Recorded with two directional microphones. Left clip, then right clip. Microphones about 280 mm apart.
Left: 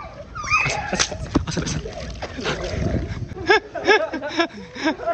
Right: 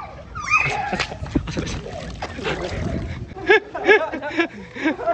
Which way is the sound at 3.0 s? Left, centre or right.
Centre.